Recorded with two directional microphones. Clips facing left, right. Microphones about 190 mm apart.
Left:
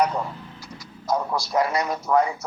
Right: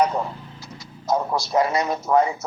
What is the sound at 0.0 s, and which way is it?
A man's voice, 25° right (ahead or behind).